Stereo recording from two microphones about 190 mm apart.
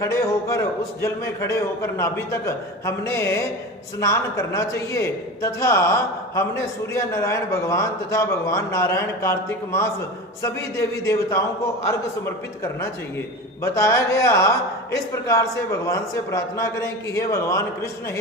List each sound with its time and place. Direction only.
0.0 s a man's voice: 15° left (ahead or behind)